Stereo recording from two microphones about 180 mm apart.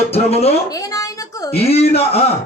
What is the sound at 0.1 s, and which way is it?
Speech, 35° left (ahead or behind).